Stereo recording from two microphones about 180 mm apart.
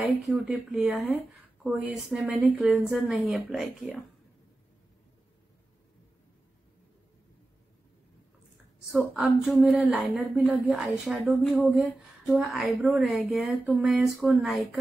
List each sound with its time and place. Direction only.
0.0 s speech: centre (ahead or behind)
8.9 s speech: centre (ahead or behind)